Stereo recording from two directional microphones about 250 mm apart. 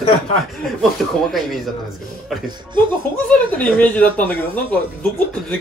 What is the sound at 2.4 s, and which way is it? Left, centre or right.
Speech, centre.